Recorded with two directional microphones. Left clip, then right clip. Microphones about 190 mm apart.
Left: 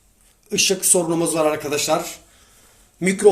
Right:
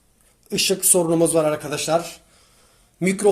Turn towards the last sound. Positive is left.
turn(degrees=-45)  # may be behind; listen again after turning